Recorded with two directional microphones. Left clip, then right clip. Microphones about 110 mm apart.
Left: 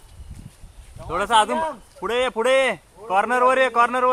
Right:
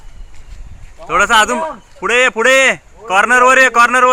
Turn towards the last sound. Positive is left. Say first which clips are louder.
# right 9 dB
turn(degrees=-5)  # may be behind; listen again after turning